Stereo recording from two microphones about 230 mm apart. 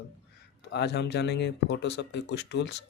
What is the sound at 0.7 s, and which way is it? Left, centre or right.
Speech, left.